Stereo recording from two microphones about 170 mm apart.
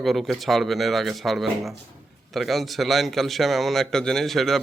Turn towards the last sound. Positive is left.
turn(degrees=0)  # may be behind; listen again after turning